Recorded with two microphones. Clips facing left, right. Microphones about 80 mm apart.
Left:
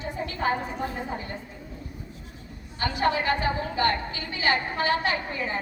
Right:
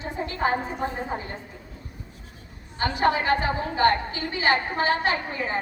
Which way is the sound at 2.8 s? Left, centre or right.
Right.